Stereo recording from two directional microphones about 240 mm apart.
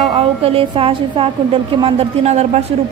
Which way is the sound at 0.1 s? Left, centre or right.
Right.